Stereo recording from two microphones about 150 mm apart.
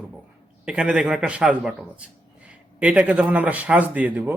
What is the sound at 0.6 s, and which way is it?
A man's voice, 5° right (ahead or behind).